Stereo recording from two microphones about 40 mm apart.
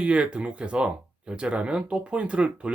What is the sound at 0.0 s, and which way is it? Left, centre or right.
Speech, right.